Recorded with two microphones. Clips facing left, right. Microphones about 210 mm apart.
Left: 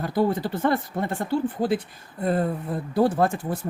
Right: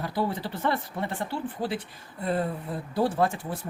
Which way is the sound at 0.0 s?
45° left (ahead or behind).